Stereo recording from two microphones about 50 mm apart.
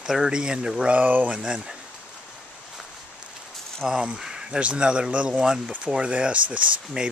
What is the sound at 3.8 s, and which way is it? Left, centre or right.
Speech, centre.